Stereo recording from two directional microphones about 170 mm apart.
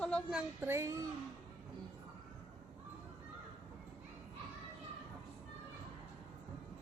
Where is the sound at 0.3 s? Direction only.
15° right (ahead or behind).